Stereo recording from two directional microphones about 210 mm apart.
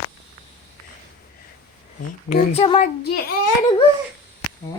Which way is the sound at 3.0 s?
45° left (ahead or behind).